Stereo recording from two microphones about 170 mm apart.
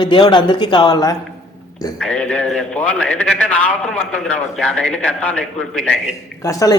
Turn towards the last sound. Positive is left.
turn(degrees=20)  # may be behind; listen again after turning